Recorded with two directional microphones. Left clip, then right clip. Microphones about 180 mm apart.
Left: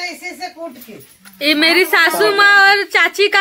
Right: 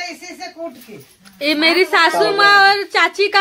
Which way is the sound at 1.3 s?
Centre (ahead or behind).